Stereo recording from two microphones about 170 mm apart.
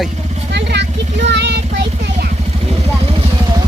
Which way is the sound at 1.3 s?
90° right.